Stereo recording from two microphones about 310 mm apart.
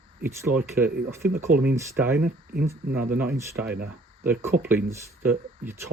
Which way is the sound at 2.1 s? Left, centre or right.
Right.